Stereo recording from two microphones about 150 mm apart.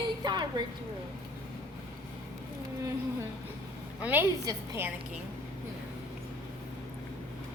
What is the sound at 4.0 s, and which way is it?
Speech, 10° right (ahead or behind).